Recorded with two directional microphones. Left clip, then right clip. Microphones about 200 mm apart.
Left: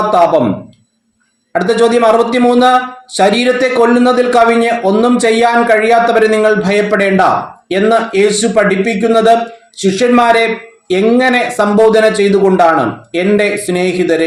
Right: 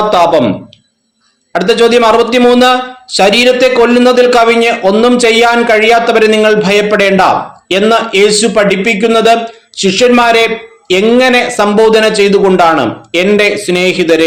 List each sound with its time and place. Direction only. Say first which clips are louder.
1.5 s a man's voice: right 3 dB; 20° right (ahead or behind)